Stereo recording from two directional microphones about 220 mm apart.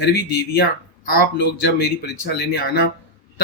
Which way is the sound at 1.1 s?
45° left (ahead or behind).